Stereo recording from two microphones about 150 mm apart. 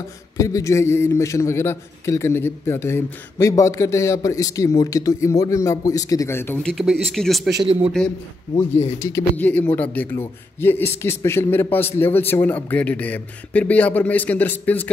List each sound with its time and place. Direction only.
0.4 s a man's voice: 20° left (ahead or behind); by 7.5 s centre (ahead or behind)
7.6 s a man's voice: 40° right (ahead or behind)
8.5 s speech: 15° left (ahead or behind)